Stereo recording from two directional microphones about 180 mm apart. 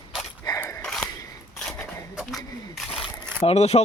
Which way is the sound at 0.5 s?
5° left (ahead or behind).